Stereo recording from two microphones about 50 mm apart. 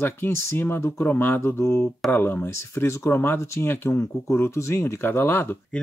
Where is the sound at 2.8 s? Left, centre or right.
Left.